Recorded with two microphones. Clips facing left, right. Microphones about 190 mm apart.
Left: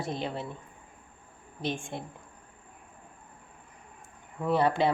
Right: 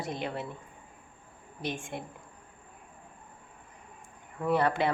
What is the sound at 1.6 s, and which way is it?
Speech, 25° left (ahead or behind).